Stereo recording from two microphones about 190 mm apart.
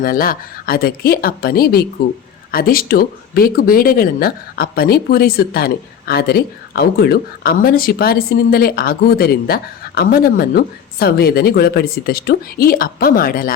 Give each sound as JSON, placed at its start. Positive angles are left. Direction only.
{"t": 0.0, "sound": "speech", "side_deg": 50}